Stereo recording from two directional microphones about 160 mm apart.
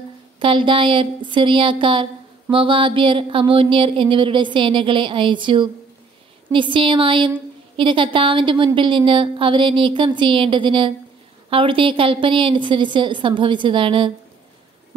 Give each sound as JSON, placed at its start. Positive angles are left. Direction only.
{"t": 0.4, "sound": "a woman's voice", "side_deg": -30}